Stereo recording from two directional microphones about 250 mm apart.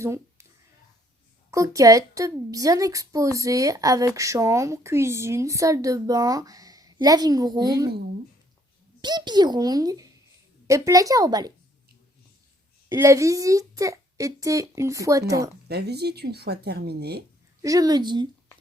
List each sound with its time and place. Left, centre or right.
0.0 s a sound: centre
1.5 s a woman's voice: centre
9.0 s a woman's voice: centre
12.9 s a woman's voice: centre
15.7 s speech: right
17.6 s a woman's voice: centre